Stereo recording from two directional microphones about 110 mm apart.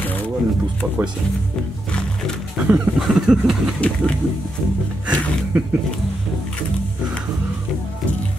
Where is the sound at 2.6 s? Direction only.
15° right (ahead or behind).